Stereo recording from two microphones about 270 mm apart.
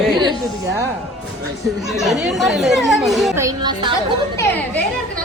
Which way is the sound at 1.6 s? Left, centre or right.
Centre.